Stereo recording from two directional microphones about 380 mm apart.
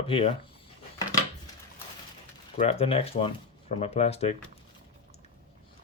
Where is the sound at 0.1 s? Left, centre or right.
Centre.